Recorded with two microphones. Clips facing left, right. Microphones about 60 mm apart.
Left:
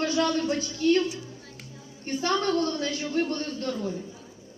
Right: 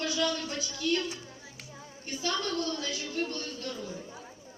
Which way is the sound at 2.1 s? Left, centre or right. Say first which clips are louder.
Left 7 dB; left.